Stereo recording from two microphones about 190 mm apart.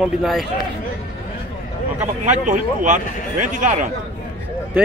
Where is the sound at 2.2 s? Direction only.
40° right (ahead or behind).